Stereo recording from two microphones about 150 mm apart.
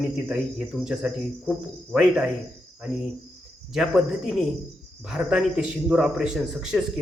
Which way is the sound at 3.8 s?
5° right (ahead or behind).